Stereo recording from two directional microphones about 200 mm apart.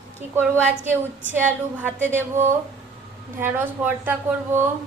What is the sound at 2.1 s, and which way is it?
A woman's voice, 10° right (ahead or behind).